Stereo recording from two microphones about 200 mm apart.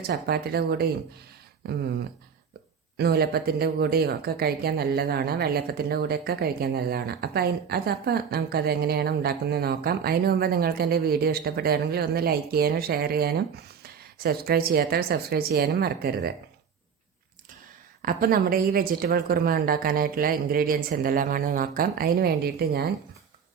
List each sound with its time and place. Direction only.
0.1 s speech: 50° right (ahead or behind)
3.0 s speech: 50° right (ahead or behind)
18.0 s speech: 45° right (ahead or behind)